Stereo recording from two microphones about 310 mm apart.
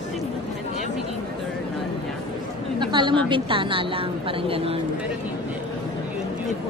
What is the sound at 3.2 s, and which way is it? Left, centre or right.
A woman's voice, centre.